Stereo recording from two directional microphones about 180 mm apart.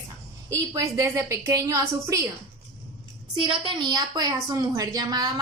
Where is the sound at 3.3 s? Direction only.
30° right (ahead or behind).